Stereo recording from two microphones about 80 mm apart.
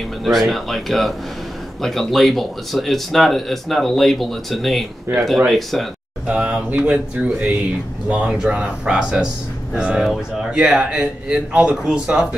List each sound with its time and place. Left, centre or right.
0.2 s speech: centre
6.2 s speech: centre